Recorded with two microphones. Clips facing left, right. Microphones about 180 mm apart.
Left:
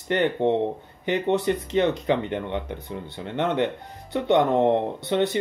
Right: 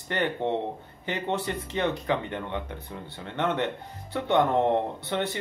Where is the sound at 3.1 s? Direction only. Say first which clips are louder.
Left 4 dB; 15° left (ahead or behind).